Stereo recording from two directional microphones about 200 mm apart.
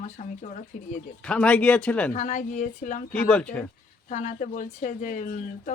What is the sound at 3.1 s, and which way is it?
Speech, 5° left (ahead or behind).